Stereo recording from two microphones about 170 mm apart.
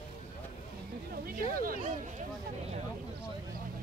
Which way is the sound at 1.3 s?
55° right (ahead or behind).